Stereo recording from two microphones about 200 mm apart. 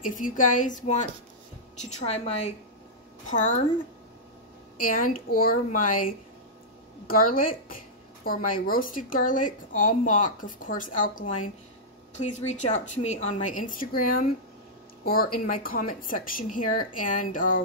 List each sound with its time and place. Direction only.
0.0 s a woman's voice: 40° left (ahead or behind)
4.7 s a woman's voice: 45° left (ahead or behind)
7.1 s a woman's voice: 45° left (ahead or behind)